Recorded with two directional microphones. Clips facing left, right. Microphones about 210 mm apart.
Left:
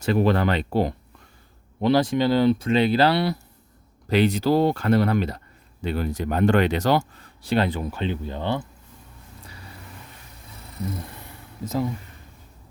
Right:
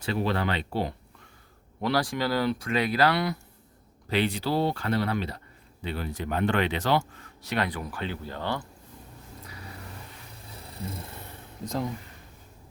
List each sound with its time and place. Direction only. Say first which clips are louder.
0.0 s speech: left 7 dB; 45° left (ahead or behind)
1.8 s speech: left 7 dB; 20° left (ahead or behind)
4.1 s speech: left 7 dB; 45° left (ahead or behind); by 8.6 s 20° left (ahead or behind)
11.6 s speech: left 5 dB; 5° left (ahead or behind)